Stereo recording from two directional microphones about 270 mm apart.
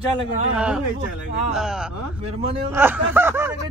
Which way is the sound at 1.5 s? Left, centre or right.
Centre.